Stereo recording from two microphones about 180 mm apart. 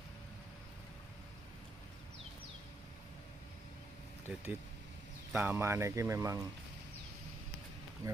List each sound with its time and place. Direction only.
4.3 s speech: 5° right (ahead or behind)
8.0 s speech: 20° right (ahead or behind)